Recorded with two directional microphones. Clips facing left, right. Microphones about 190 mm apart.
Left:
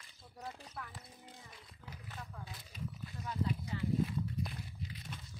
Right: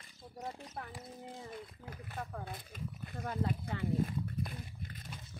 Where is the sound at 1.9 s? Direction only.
55° right (ahead or behind).